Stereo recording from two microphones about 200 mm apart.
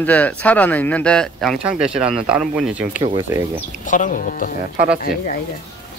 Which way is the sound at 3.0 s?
20° right (ahead or behind).